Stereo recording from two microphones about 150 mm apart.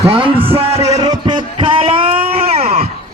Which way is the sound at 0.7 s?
20° right (ahead or behind).